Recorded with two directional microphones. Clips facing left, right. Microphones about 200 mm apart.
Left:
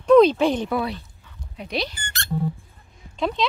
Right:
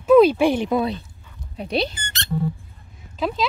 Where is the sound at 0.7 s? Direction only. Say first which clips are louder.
Right 4 dB; 20° right (ahead or behind).